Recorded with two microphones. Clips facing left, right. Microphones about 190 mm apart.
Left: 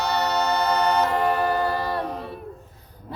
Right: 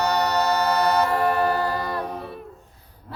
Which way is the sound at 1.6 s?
25° left (ahead or behind).